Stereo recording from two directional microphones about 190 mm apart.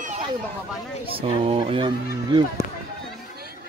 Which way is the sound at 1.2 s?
30° right (ahead or behind).